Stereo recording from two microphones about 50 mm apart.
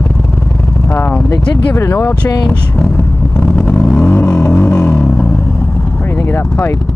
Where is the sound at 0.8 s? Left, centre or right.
Left.